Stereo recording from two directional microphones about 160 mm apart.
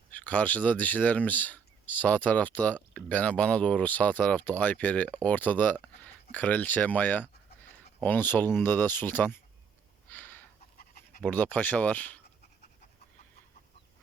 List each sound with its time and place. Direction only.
0.1 s speech: 10° left (ahead or behind)
10.1 s a sound: 10° left (ahead or behind)
10.8 s dog: 65° left (ahead or behind)
11.2 s speech: 10° left (ahead or behind)